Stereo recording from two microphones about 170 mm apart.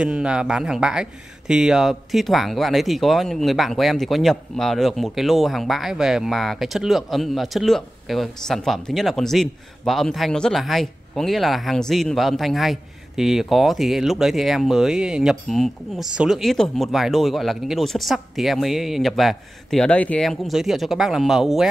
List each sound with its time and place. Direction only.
0.0 s speech: 5° right (ahead or behind)